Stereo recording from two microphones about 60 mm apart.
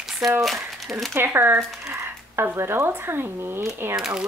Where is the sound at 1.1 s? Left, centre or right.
Right.